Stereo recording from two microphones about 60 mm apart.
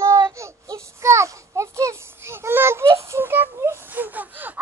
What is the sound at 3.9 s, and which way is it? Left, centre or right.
Gasp, right.